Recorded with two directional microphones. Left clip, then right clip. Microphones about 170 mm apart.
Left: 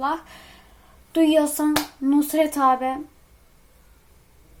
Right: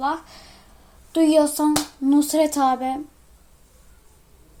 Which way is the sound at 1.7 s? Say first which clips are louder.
Right 1 dB; 35° right (ahead or behind).